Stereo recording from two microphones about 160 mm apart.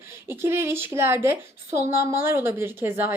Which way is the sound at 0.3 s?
15° right (ahead or behind).